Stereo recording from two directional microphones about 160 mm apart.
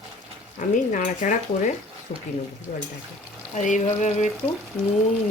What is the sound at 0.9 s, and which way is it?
Speech, 55° left (ahead or behind).